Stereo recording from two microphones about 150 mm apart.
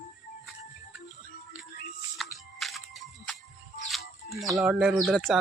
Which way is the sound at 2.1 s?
Centre (ahead or behind).